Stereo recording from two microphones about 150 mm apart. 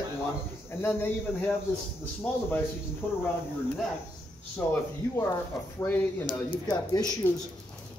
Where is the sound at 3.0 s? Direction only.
15° left (ahead or behind).